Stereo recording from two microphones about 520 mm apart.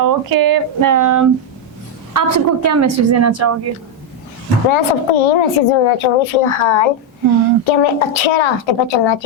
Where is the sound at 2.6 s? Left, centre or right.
Right.